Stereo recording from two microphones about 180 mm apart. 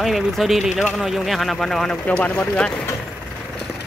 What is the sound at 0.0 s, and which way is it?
Speech, centre (ahead or behind).